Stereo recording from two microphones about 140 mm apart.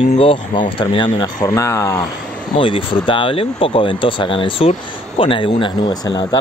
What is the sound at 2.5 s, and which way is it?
Speech, 40° left (ahead or behind).